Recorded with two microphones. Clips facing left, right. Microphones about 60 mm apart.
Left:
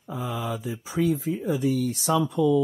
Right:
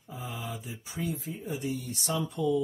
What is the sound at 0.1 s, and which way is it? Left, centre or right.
Mantra, left.